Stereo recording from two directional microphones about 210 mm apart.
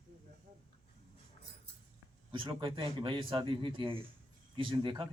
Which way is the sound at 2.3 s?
25° right (ahead or behind).